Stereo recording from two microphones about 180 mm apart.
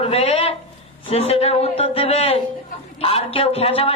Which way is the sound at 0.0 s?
35° left (ahead or behind).